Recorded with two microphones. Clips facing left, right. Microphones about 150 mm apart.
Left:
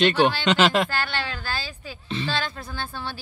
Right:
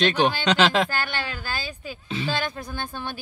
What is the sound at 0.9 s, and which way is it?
A woman's voice, 15° right (ahead or behind).